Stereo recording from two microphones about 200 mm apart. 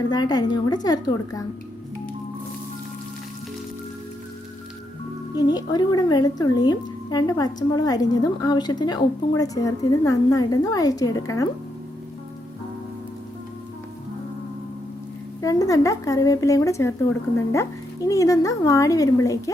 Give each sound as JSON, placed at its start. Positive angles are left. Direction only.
{"t": 0.1, "sound": "speech", "side_deg": 20}
{"t": 5.3, "sound": "speech", "side_deg": 20}
{"t": 15.4, "sound": "speech", "side_deg": 15}